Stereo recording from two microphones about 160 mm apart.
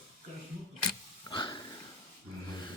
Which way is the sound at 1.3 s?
30° left (ahead or behind).